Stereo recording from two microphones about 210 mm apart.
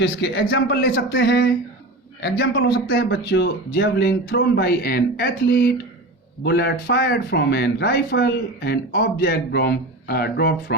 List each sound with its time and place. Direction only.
0.0 s a man's voice: 55° left (ahead or behind)